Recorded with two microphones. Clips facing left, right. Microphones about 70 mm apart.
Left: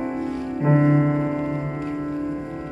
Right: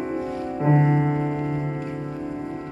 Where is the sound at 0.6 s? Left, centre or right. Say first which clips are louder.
Left 2 dB; centre.